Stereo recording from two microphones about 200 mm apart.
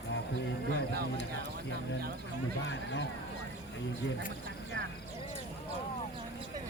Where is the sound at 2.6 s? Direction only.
65° left (ahead or behind).